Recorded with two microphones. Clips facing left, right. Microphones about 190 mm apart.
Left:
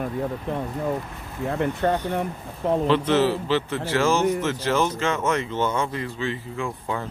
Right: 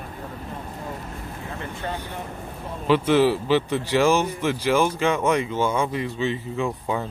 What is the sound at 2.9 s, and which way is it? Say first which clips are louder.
Speech: right 4 dB; 10° right (ahead or behind).